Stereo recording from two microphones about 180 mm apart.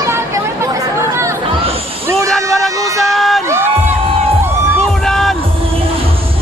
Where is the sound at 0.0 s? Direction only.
15° right (ahead or behind).